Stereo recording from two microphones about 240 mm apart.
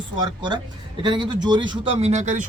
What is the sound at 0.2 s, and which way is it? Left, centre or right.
A man's voice, centre.